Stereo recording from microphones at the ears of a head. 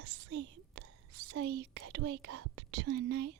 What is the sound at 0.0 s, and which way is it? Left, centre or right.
Whispering, right.